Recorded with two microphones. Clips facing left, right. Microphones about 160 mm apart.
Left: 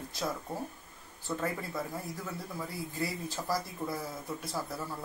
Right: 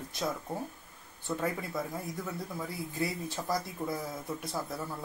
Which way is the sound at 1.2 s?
20° right (ahead or behind).